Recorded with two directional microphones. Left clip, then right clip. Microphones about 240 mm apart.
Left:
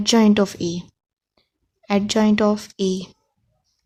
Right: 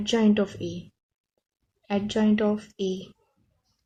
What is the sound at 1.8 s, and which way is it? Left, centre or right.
A woman's voice, left.